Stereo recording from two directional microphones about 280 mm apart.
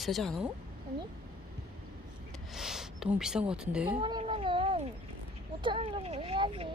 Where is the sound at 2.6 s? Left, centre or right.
Centre.